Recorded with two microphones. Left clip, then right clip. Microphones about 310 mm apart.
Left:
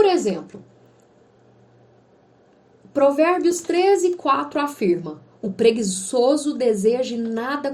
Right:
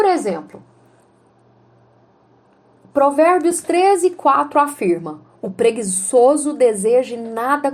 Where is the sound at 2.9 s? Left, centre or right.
Centre.